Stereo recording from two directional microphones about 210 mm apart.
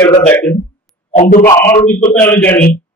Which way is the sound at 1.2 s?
40° left (ahead or behind).